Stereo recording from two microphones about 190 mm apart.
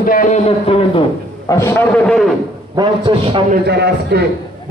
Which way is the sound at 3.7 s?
60° right (ahead or behind).